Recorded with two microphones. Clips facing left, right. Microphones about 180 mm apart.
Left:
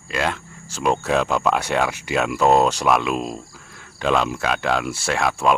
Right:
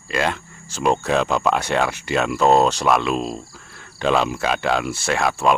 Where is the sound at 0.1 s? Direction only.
Centre (ahead or behind).